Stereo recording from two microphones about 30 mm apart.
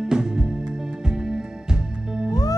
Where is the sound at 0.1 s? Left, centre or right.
Right.